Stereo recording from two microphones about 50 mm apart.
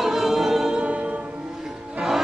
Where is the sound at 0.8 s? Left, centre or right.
Right.